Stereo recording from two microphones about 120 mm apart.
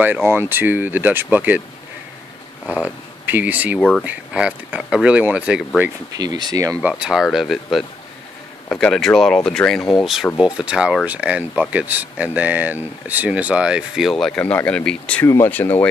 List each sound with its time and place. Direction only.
0.0 s speech: 15° right (ahead or behind)
2.7 s speech: 15° right (ahead or behind)
6.1 s speech: 35° right (ahead or behind)
6.8 s speech: 5° right (ahead or behind)
14.4 s speech: 15° left (ahead or behind)
15.2 s speech: 25° left (ahead or behind)